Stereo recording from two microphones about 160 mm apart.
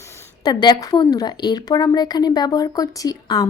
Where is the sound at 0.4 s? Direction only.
25° left (ahead or behind).